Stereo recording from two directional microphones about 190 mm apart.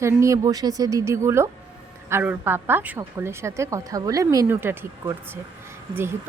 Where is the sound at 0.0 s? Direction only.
15° right (ahead or behind).